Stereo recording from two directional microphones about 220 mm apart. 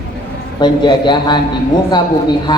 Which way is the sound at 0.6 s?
20° left (ahead or behind).